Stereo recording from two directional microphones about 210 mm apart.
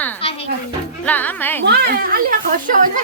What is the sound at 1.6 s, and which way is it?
Speech, 50° right (ahead or behind).